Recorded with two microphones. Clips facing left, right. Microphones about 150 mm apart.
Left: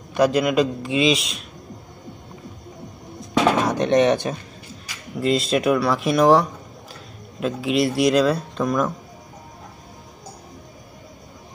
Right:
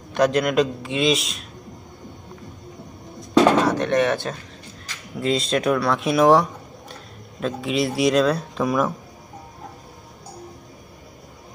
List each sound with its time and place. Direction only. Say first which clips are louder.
0.1 s a man's voice: left 1 dB; centre (ahead or behind)
3.6 s speech: left 2 dB; 15° left (ahead or behind)
4.8 s speech: left 2 dB; centre (ahead or behind)